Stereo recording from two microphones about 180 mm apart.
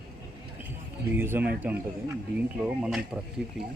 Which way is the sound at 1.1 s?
10° right (ahead or behind).